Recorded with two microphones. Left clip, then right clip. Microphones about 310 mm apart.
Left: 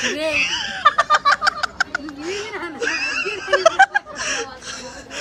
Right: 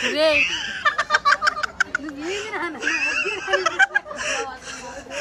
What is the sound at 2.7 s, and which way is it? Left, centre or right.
Snicker, centre.